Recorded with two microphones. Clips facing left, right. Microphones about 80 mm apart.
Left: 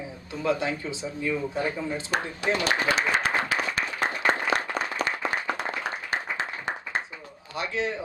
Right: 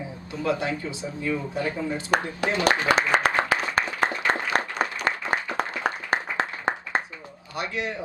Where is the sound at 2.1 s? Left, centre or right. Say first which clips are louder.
Right 5 dB; right.